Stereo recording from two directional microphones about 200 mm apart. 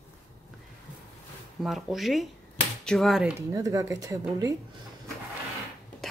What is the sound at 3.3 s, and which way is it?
Speech, 15° right (ahead or behind).